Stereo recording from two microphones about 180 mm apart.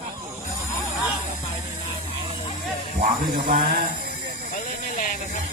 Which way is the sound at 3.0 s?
55° right (ahead or behind).